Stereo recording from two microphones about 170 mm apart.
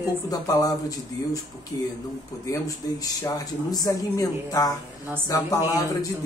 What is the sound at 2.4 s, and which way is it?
Speech, 20° left (ahead or behind).